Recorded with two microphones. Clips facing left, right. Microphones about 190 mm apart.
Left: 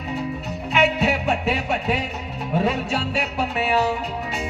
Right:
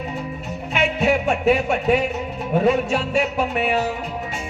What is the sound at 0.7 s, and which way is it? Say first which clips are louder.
Music: right 1 dB; 50° right (ahead or behind).